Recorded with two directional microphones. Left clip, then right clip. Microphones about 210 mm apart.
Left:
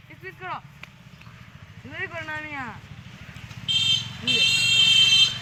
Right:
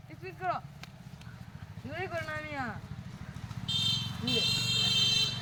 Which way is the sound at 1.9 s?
40° right (ahead or behind).